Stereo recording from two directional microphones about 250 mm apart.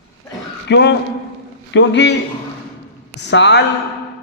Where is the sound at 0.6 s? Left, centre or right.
Left.